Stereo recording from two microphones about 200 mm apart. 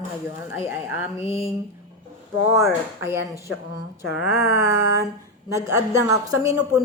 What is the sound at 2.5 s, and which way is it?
Speech, 15° right (ahead or behind).